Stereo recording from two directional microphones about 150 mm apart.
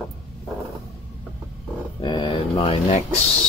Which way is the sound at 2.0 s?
35° left (ahead or behind).